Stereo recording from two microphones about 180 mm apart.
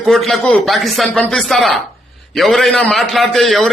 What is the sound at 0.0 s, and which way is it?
A man's voice, centre (ahead or behind).